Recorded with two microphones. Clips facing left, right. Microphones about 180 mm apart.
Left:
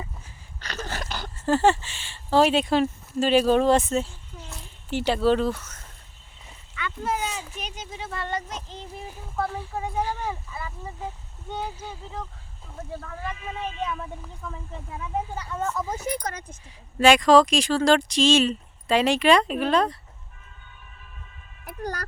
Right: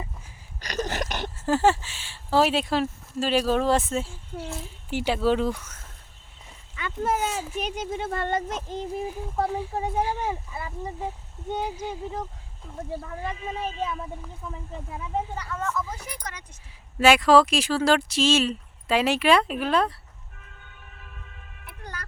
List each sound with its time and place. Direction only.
0.6 s a sound: 15° right (ahead or behind)
1.4 s speech: 5° right (ahead or behind)
6.7 s speech: 45° right (ahead or behind)
10.0 s speech: 15° right (ahead or behind)
11.5 s speech: 15° right (ahead or behind)
13.3 s speech: 30° right (ahead or behind)
14.4 s speech: 10° right (ahead or behind)
15.5 s speech: 30° left (ahead or behind)
17.0 s speech: 5° right (ahead or behind)
20.4 s train: 70° right (ahead or behind)
21.6 s a sound: 40° left (ahead or behind)